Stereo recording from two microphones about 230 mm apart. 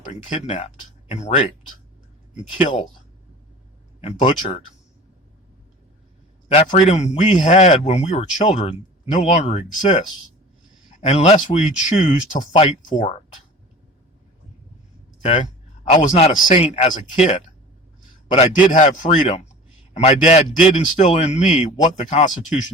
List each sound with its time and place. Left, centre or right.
0.1 s speech: left
4.0 s speech: left
6.5 s a man's voice: left
15.2 s a sound: left
16.0 s speech: left
18.3 s a man's voice: left